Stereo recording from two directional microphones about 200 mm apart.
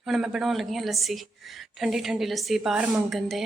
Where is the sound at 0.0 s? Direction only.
Centre (ahead or behind).